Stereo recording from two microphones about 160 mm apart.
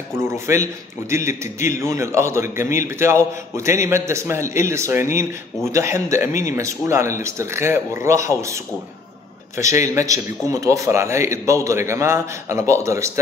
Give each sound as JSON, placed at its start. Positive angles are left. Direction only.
{"t": 0.1, "sound": "a man's voice", "side_deg": -15}
{"t": 9.6, "sound": "a man's voice", "side_deg": -20}